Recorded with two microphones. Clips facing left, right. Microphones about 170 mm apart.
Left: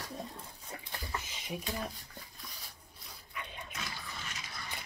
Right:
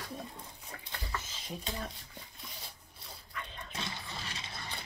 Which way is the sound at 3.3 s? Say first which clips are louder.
Even; 15° left (ahead or behind).